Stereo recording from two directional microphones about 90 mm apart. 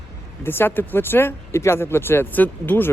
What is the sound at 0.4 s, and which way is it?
Speech, 25° left (ahead or behind).